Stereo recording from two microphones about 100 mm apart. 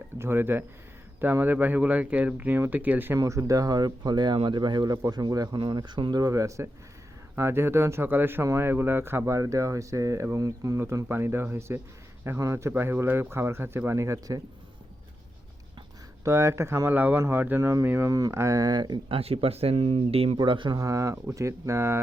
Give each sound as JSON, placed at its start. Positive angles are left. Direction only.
{"t": 0.2, "sound": "speech", "side_deg": -20}
{"t": 3.2, "sound": "speech", "side_deg": -30}
{"t": 5.5, "sound": "speech", "side_deg": -50}
{"t": 16.2, "sound": "speech", "side_deg": -30}
{"t": 17.6, "sound": "speech", "side_deg": -30}
{"t": 19.1, "sound": "speech", "side_deg": -75}
{"t": 20.7, "sound": "speech", "side_deg": -35}